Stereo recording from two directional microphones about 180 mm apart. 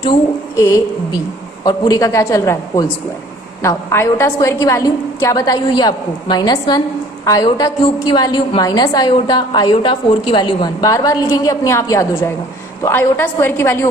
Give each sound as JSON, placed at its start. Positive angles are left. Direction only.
{"t": 0.6, "sound": "a woman's voice", "side_deg": 15}